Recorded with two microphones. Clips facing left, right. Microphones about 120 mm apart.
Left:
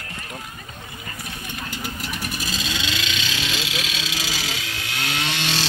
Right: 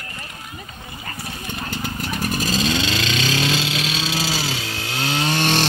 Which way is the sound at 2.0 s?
40° right (ahead or behind).